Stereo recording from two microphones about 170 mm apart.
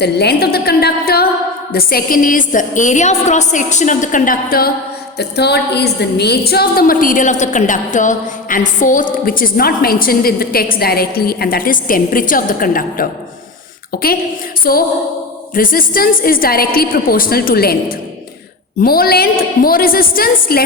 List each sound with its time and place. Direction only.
0.0 s a woman's voice: 75° left (ahead or behind)
5.1 s a woman's voice: 75° left (ahead or behind)
14.6 s a sound: 60° left (ahead or behind)
15.5 s a woman's voice: 55° left (ahead or behind)